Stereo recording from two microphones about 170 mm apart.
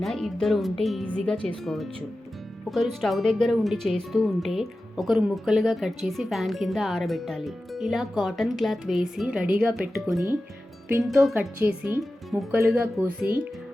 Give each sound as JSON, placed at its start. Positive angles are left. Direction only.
{"t": 0.0, "sound": "speech", "side_deg": 0}